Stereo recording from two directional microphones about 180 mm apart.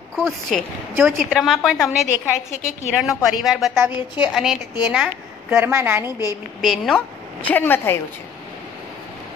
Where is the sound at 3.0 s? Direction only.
Centre (ahead or behind).